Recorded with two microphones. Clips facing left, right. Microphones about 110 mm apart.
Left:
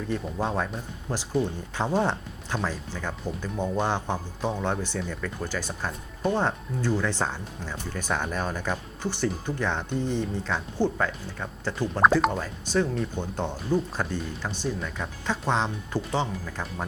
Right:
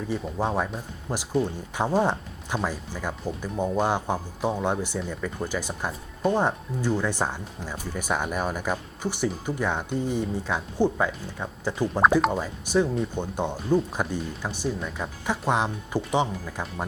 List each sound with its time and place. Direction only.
0.1 s speech: 10° right (ahead or behind)